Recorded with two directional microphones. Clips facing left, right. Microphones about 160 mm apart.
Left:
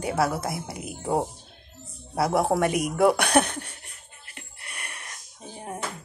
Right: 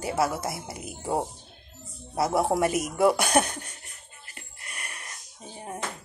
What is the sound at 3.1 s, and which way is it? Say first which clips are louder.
Speech: left 2 dB; 60° left (ahead or behind).